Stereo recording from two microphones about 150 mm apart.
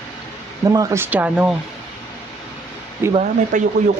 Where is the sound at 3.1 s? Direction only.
55° right (ahead or behind).